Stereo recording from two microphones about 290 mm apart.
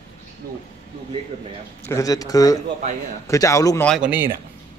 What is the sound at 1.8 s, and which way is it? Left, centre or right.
Speech, centre.